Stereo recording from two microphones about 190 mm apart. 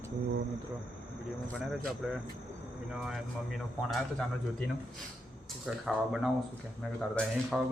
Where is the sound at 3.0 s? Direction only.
Centre (ahead or behind).